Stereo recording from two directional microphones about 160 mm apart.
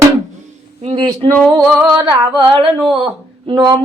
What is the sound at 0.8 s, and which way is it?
Speech, 35° right (ahead or behind).